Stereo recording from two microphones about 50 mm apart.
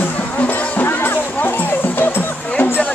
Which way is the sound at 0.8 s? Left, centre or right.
Left.